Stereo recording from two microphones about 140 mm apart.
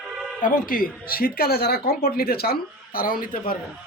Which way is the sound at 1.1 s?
90° left.